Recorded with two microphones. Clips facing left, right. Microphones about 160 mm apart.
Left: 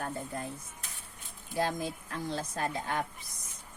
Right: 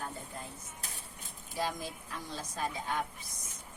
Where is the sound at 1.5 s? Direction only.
55° left (ahead or behind).